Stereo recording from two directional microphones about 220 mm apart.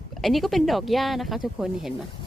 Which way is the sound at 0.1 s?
Centre (ahead or behind).